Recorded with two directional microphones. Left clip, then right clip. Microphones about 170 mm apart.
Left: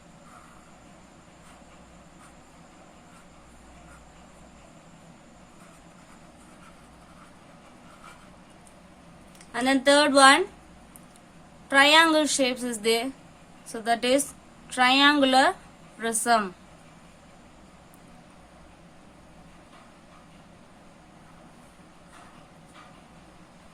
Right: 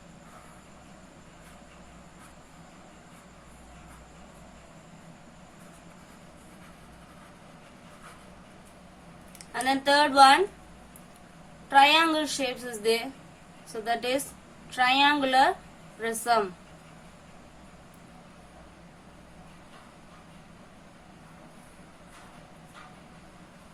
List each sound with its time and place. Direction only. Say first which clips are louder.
9.5 s a woman's voice: left 3 dB; 45° left (ahead or behind)
11.7 s a woman's voice: left 2 dB; 50° left (ahead or behind)